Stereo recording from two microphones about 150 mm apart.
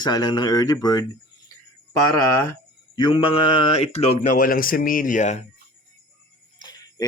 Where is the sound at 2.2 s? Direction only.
20° left (ahead or behind).